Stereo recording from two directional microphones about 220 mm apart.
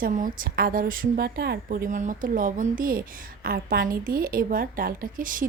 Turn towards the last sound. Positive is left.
turn(degrees=-40)  # may be behind; listen again after turning